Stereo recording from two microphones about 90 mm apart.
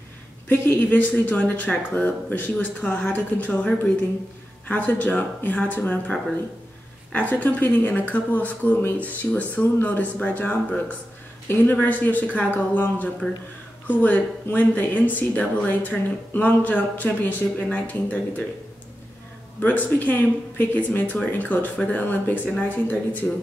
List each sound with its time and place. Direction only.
0.5 s speech: 20° left (ahead or behind)
19.6 s speech: 20° left (ahead or behind)